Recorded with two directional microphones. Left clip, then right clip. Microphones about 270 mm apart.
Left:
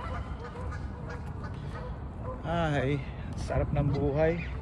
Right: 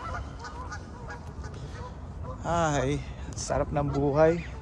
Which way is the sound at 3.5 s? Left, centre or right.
Right.